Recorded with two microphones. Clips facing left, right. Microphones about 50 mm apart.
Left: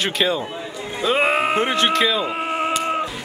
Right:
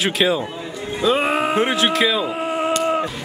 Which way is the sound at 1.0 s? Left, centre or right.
Left.